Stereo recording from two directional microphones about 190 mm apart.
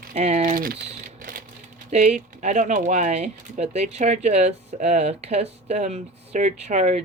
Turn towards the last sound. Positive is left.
turn(degrees=-40)  # may be behind; listen again after turning